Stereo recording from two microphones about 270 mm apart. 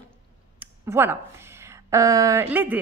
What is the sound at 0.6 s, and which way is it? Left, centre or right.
Speech, centre.